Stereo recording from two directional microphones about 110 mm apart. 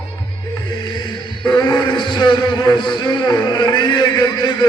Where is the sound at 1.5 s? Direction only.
40° left (ahead or behind).